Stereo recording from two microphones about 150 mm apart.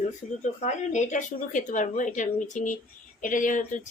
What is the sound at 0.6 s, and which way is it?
Speech, 50° left (ahead or behind).